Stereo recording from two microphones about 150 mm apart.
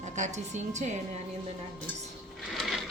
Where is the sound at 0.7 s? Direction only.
50° right (ahead or behind).